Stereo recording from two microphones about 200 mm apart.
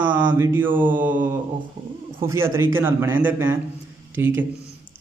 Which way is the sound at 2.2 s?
10° right (ahead or behind).